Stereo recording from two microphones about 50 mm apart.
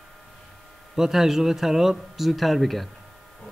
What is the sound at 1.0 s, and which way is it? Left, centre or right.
Speech, centre.